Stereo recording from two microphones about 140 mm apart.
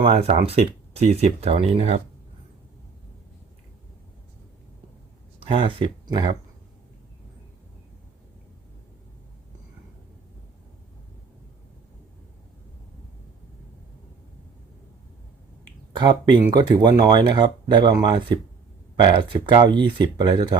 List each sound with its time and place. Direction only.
0.0 s speech: 50° right (ahead or behind)
5.4 s speech: 40° right (ahead or behind)
16.0 s speech: 35° right (ahead or behind)